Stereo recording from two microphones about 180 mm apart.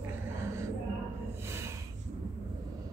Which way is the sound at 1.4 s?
15° right (ahead or behind).